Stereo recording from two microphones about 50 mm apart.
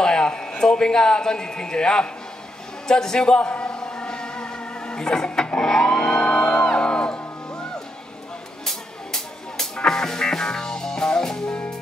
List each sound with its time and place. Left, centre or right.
0.0 s a man's voice: centre
3.3 s music: left
8.6 s music: centre